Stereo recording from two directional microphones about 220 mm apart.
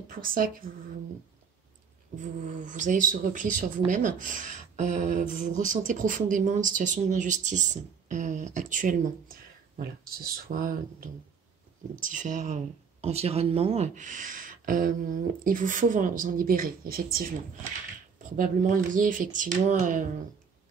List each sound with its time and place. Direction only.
0.2 s speech: 40° right (ahead or behind)
2.1 s speech: 35° right (ahead or behind)
18.3 s speech: 40° right (ahead or behind)